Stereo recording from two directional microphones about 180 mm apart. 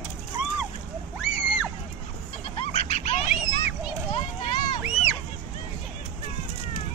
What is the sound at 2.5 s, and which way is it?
Goat, 35° left (ahead or behind).